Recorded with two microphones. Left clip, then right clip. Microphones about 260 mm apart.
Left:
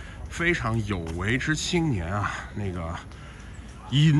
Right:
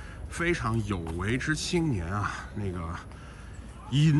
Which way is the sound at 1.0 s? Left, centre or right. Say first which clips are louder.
Left 6 dB; centre.